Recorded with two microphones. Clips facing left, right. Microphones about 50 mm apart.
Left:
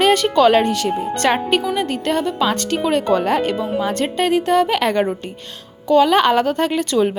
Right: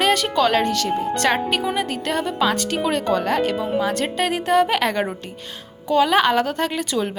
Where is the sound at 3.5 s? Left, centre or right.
Centre.